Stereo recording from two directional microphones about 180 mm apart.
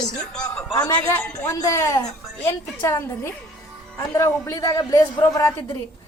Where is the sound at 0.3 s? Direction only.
20° left (ahead or behind).